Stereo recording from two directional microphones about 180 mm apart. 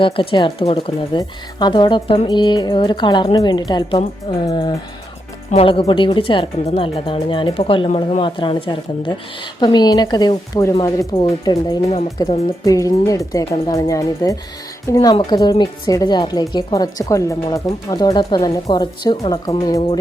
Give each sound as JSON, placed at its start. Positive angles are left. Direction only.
{"t": 0.0, "sound": "a woman's voice", "side_deg": 30}